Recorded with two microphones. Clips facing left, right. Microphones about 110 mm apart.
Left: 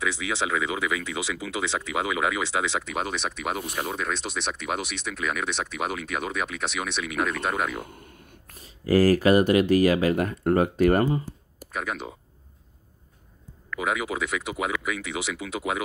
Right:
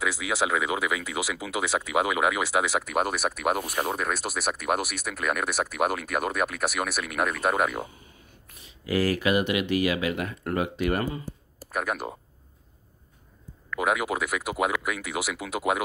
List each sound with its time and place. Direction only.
0.0 s speech: 5° right (ahead or behind)
8.5 s speech: 40° left (ahead or behind)
11.7 s speech: 5° right (ahead or behind)
13.7 s speech: 5° right (ahead or behind)